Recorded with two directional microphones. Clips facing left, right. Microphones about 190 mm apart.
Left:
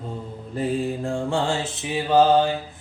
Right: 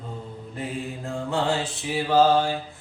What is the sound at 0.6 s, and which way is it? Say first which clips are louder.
Mantra: left 8 dB; 30° left (ahead or behind).